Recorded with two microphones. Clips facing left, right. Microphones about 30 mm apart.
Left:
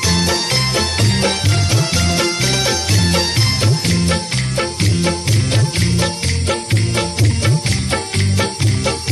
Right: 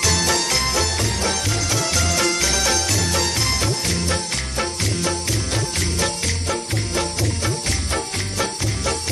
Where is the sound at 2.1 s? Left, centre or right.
Left.